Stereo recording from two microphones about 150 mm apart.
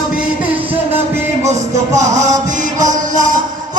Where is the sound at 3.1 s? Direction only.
60° right (ahead or behind).